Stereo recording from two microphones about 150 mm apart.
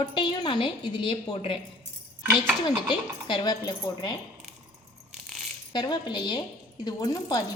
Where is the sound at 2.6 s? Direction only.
30° left (ahead or behind).